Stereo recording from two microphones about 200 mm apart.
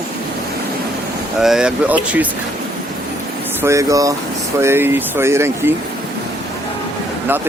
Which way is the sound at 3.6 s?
15° right (ahead or behind).